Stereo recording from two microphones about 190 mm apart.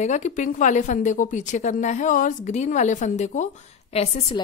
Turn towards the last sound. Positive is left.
turn(degrees=30)  # may be behind; listen again after turning